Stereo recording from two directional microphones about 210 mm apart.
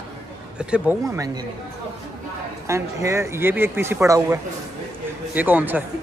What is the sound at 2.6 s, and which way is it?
A man's voice, 15° right (ahead or behind).